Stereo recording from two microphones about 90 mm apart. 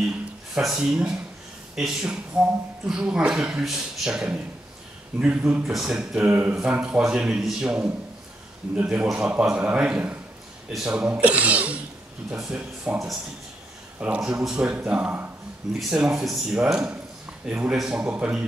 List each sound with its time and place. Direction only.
0.6 s speech: 5° right (ahead or behind)
5.6 s speech: 5° right (ahead or behind)
6.2 s speech: 20° right (ahead or behind)
6.5 s speech: 10° right (ahead or behind)